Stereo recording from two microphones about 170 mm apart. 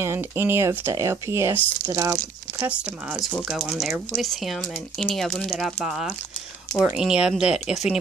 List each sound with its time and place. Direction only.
0.0 s speech: 15° right (ahead or behind)
2.6 s speech: 10° right (ahead or behind)